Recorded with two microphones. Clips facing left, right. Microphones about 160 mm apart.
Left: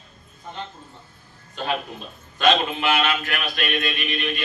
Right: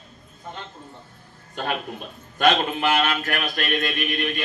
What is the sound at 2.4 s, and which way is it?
Mantra, 45° right (ahead or behind).